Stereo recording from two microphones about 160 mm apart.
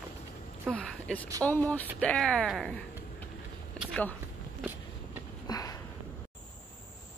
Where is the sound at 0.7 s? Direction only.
5° left (ahead or behind).